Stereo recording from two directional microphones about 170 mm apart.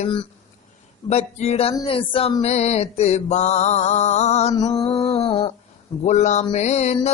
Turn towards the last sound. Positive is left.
turn(degrees=40)  # may be behind; listen again after turning